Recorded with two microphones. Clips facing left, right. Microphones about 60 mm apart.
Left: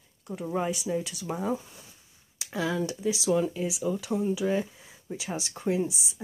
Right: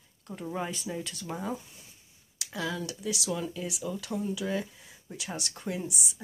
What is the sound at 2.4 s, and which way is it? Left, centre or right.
Speech, left.